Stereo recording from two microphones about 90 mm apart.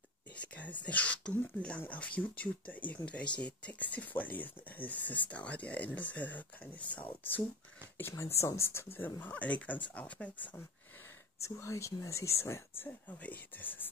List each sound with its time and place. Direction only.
0.4 s speech: 15° left (ahead or behind)
8.1 s speech: 30° left (ahead or behind); by 10.6 s 15° left (ahead or behind)
11.4 s speech: 30° left (ahead or behind)